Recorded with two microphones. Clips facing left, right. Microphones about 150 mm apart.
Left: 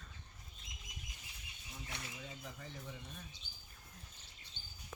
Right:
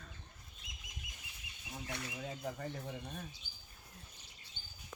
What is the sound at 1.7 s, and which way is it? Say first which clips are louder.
Speech: right 6 dB; 50° right (ahead or behind).